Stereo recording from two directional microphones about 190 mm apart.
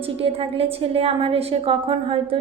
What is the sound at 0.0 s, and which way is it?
A woman's voice, 30° right (ahead or behind).